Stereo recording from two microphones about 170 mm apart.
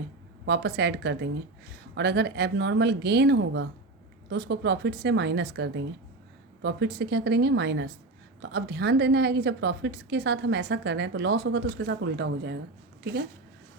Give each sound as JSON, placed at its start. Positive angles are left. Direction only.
{"t": 0.4, "sound": "a woman's voice", "side_deg": -90}
{"t": 2.0, "sound": "a woman's voice", "side_deg": -80}